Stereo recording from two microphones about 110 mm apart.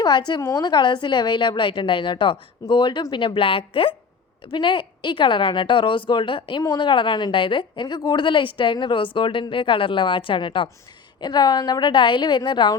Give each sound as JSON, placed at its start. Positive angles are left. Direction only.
{"t": 0.0, "sound": "a woman's voice", "side_deg": 40}
{"t": 6.6, "sound": "a woman's voice", "side_deg": 40}
{"t": 11.2, "sound": "a woman's voice", "side_deg": 40}